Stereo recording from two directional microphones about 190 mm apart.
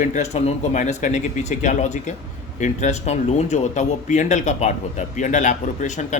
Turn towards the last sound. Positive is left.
turn(degrees=40)  # may be behind; listen again after turning